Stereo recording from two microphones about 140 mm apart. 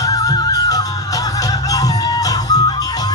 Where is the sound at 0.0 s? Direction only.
25° left (ahead or behind).